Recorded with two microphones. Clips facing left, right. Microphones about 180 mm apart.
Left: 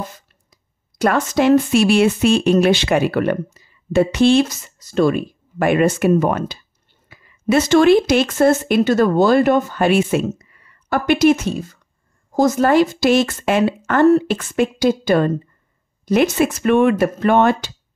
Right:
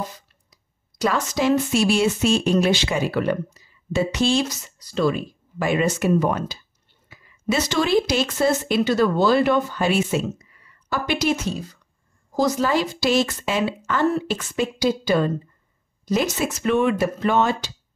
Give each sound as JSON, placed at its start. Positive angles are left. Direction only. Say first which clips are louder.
{"t": 0.9, "sound": "speech", "louder": "left 6 dB", "side_deg": 55}
{"t": 16.3, "sound": "speech", "louder": "left 6 dB", "side_deg": 55}